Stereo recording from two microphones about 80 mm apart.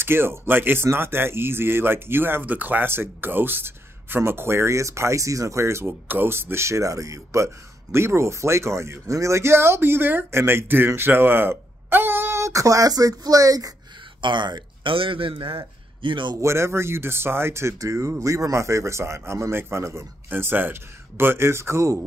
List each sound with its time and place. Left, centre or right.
0.0 s speech: right
14.2 s speech: right
16.3 s speech: right